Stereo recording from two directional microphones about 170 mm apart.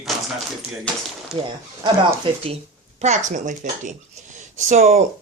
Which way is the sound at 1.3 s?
5° right (ahead or behind).